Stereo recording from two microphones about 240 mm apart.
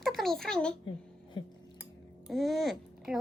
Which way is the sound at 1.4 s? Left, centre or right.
Centre.